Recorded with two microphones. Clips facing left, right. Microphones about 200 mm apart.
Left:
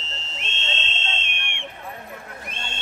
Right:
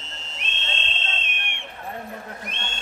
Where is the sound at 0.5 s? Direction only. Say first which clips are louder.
Left 1 dB; 10° right (ahead or behind).